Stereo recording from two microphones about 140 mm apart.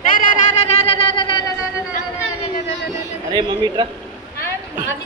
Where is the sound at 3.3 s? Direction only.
35° right (ahead or behind).